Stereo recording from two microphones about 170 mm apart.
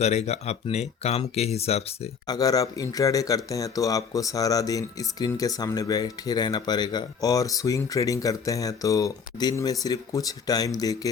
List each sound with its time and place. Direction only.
0.3 s speech: 40° left (ahead or behind)
2.2 s speech: 20° left (ahead or behind)